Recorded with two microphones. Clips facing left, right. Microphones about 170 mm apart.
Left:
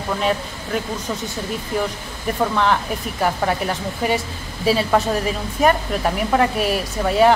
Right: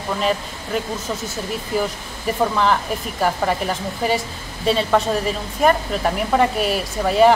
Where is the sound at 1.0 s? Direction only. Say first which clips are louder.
Even; 5° right (ahead or behind).